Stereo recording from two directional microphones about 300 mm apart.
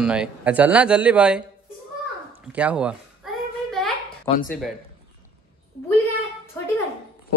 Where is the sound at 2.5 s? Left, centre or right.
Centre.